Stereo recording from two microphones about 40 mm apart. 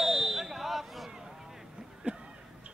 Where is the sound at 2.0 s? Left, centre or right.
Right.